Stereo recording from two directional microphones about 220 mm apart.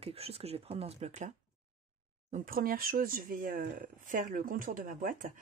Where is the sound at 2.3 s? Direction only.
40° right (ahead or behind).